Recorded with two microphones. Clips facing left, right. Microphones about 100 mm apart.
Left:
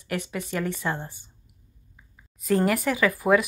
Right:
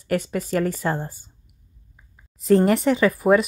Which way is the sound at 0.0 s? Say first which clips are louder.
Right 7 dB; 35° right (ahead or behind).